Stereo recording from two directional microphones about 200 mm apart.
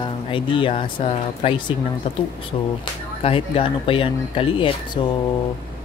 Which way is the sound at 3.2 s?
30° left (ahead or behind).